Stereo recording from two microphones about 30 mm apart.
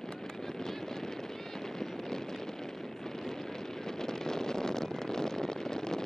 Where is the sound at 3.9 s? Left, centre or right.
Centre.